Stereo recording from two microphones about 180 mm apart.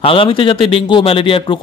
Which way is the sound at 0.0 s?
30° left (ahead or behind).